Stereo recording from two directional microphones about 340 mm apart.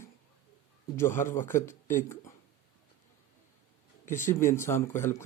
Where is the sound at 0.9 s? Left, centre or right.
Centre.